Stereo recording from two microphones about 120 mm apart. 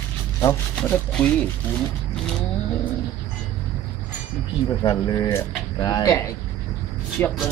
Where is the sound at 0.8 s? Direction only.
10° left (ahead or behind).